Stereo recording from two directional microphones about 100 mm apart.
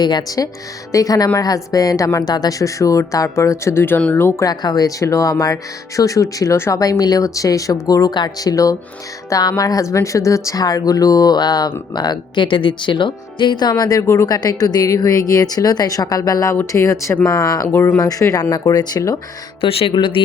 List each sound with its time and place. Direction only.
0.0 s speech: 40° left (ahead or behind); by 4.4 s 25° left (ahead or behind)
4.4 s speech: 40° left (ahead or behind); by 17.9 s 25° left (ahead or behind)
17.9 s speech: 35° left (ahead or behind)
19.6 s speech: 65° left (ahead or behind)